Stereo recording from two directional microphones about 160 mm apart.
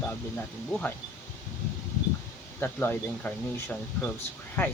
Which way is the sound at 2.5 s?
15° left (ahead or behind).